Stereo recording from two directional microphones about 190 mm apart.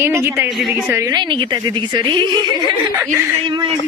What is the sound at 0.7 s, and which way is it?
A woman's voice, 10° right (ahead or behind).